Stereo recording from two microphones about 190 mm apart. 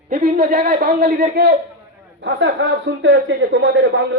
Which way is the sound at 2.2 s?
75° right (ahead or behind).